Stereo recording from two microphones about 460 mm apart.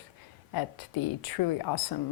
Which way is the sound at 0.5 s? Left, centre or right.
Left.